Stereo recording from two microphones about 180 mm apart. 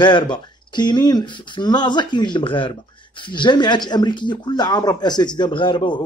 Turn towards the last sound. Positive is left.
turn(degrees=25)  # may be behind; listen again after turning